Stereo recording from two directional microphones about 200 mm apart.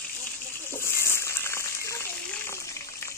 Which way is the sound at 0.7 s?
15° left (ahead or behind).